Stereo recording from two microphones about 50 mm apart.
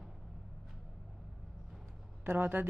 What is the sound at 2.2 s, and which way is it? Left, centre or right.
Speech, right.